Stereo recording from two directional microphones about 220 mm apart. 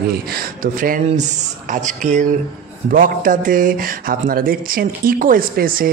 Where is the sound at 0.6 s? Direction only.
40° right (ahead or behind).